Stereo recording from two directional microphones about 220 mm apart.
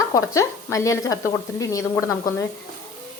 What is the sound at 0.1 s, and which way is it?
A woman's voice, 15° left (ahead or behind).